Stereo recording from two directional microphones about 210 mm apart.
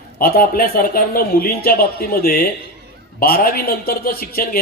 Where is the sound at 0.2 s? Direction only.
45° left (ahead or behind).